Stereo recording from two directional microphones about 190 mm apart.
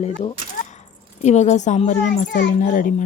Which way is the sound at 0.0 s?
35° left (ahead or behind).